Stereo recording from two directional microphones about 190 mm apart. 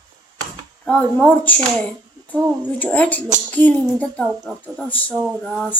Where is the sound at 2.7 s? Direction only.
10° left (ahead or behind).